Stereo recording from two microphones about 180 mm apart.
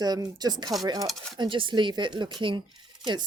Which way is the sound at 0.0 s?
20° right (ahead or behind).